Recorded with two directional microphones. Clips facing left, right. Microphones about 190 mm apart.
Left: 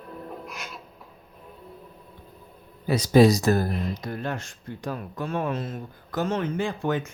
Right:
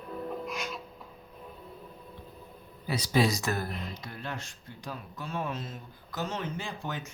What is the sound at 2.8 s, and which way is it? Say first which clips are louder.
Speech: left 10 dB; 45° left (ahead or behind).